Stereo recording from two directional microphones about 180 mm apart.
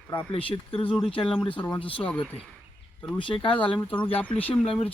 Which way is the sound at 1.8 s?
30° left (ahead or behind).